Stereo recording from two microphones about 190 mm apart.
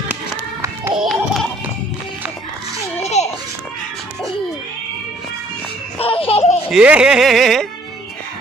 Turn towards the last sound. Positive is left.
turn(degrees=0)  # may be behind; listen again after turning